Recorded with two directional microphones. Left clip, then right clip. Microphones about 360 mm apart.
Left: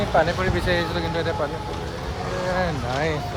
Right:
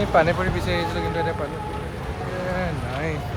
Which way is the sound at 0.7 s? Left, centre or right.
Centre.